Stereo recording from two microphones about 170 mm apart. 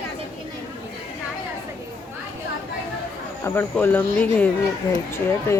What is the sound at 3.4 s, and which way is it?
Speech, 10° left (ahead or behind).